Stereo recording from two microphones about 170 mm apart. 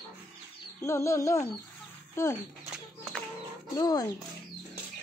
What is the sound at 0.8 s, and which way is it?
Speech, 15° left (ahead or behind).